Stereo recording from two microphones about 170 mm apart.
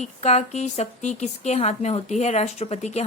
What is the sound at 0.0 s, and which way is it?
Speech, 40° left (ahead or behind).